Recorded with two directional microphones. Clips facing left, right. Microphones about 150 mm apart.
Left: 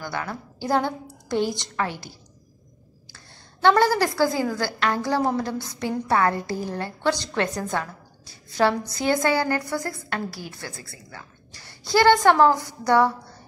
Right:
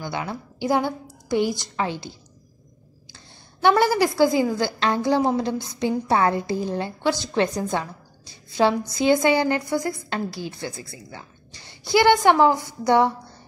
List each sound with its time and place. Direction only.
0.0 s a woman's voice: 15° right (ahead or behind)
3.6 s a woman's voice: 15° right (ahead or behind)